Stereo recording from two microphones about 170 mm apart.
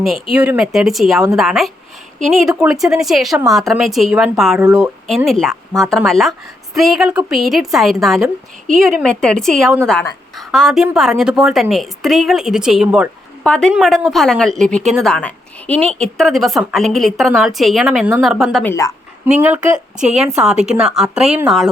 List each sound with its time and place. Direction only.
0.3 s a woman's voice: 5° right (ahead or behind)
18.6 s speech: 15° left (ahead or behind)
19.2 s a woman's voice: 10° right (ahead or behind)